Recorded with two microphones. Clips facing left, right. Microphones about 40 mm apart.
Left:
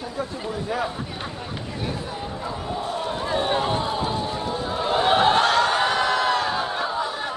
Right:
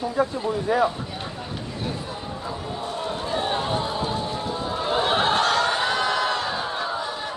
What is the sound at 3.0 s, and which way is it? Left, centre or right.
Chatter, left.